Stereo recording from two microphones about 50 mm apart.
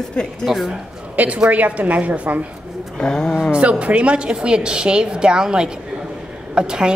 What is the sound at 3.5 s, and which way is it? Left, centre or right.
A woman's voice, right.